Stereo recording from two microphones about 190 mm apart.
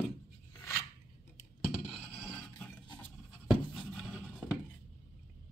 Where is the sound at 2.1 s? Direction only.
10° left (ahead or behind).